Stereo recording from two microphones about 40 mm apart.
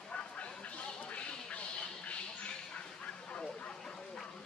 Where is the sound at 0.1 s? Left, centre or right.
Left.